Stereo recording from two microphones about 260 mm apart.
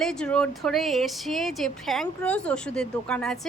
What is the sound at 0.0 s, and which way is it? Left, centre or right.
Speech, centre.